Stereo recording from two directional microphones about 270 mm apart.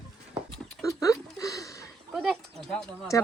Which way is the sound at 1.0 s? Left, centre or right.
Centre.